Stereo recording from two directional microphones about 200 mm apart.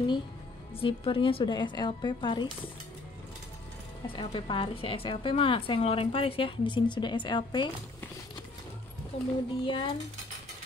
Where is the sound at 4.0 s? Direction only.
25° left (ahead or behind).